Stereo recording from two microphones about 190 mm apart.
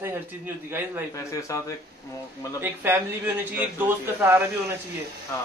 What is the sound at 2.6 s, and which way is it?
A man's voice, 10° right (ahead or behind).